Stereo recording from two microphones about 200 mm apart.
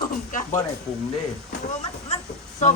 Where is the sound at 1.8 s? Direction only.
30° left (ahead or behind).